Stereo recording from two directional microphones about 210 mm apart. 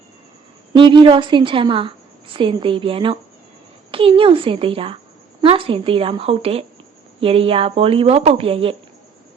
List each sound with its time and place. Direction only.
0.7 s speech: 20° right (ahead or behind)